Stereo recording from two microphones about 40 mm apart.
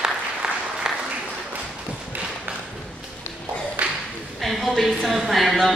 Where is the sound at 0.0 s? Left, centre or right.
Centre.